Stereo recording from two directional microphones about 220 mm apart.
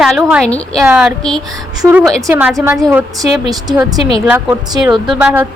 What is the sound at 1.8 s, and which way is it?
Speech, 15° right (ahead or behind).